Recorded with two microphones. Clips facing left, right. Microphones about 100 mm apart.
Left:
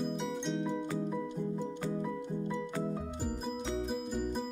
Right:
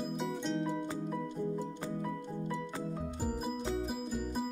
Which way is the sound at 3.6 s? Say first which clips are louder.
Even; 5° right (ahead or behind).